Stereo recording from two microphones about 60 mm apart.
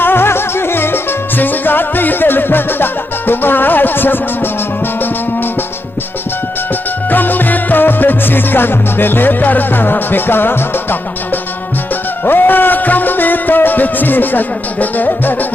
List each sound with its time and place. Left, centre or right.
0.0 s music: left
7.1 s music: left
12.3 s music: left